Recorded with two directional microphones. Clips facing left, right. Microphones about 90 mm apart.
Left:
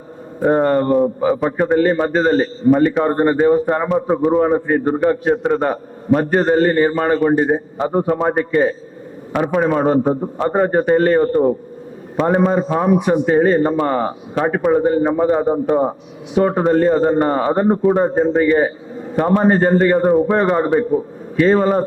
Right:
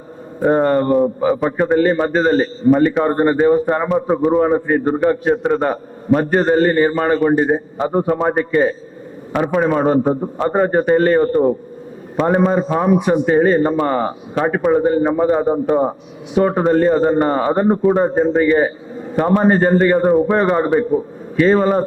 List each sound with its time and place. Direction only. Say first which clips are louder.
0.4 s a man's voice: even; 15° right (ahead or behind)